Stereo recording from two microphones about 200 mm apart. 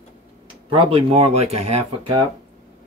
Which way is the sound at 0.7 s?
25° right (ahead or behind).